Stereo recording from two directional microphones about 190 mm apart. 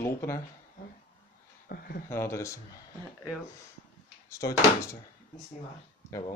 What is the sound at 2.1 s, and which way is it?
Speech, 15° left (ahead or behind).